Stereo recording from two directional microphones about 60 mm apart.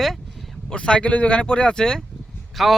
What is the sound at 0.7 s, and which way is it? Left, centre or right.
Speech, centre.